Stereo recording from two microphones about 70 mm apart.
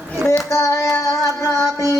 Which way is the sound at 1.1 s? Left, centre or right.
Left.